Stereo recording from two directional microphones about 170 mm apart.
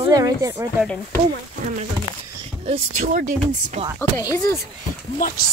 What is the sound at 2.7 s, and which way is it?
Speech, 45° right (ahead or behind).